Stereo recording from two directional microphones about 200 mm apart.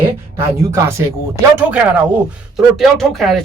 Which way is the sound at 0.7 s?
15° right (ahead or behind).